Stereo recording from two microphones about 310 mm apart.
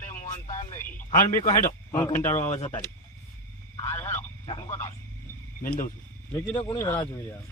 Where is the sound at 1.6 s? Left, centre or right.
Centre.